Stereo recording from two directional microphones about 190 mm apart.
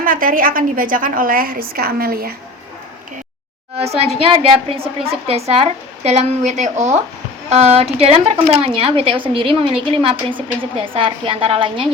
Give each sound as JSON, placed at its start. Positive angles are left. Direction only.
{"t": 0.0, "sound": "a woman's voice", "side_deg": -45}
{"t": 3.8, "sound": "a woman's voice", "side_deg": -35}